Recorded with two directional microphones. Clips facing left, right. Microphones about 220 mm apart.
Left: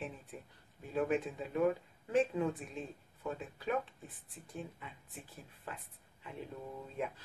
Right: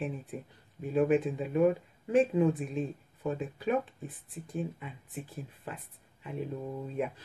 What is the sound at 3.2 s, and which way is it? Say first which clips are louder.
Speech: right 7 dB; 15° right (ahead or behind).